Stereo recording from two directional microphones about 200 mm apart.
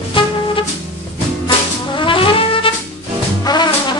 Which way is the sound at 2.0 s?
25° left (ahead or behind).